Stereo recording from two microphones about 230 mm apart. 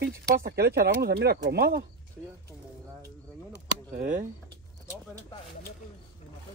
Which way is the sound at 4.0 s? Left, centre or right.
Right.